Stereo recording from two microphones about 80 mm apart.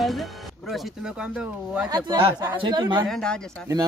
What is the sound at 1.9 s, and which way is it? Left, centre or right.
Speech, right.